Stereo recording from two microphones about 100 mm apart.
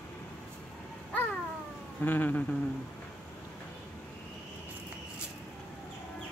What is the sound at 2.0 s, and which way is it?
Speech, 20° left (ahead or behind).